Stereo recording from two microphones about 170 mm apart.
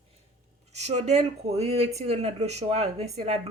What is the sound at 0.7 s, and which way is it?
Speech, 40° right (ahead or behind).